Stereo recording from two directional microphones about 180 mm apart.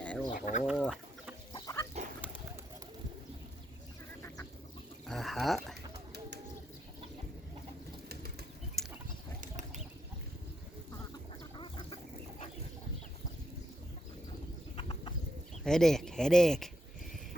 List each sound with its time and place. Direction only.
0.0 s chicken: 5° left (ahead or behind)
0.3 s speech: 50° left (ahead or behind)
0.6 s chicken: centre (ahead or behind)
1.5 s chicken: 20° left (ahead or behind)
5.0 s a sound: centre (ahead or behind)
8.8 s pig: centre (ahead or behind)
9.4 s a sound: 45° right (ahead or behind)
11.5 s duck: 25° left (ahead or behind)
14.8 s bird: 30° left (ahead or behind)
15.6 s speech: centre (ahead or behind)